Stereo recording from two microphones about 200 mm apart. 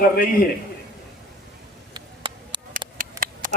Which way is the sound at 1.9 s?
25° right (ahead or behind).